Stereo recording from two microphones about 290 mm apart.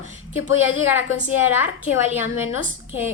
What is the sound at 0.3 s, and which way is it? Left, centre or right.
Speech, left.